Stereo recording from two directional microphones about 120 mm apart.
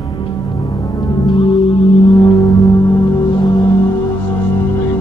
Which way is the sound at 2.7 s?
30° left (ahead or behind).